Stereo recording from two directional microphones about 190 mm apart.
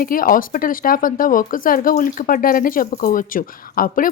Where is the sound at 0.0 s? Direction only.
50° left (ahead or behind).